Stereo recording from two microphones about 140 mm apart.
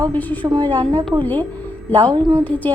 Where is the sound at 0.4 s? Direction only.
25° right (ahead or behind).